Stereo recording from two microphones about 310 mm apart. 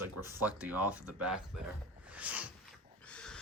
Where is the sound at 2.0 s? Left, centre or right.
Centre.